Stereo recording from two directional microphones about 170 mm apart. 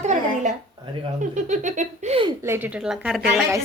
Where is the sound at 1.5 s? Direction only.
45° right (ahead or behind).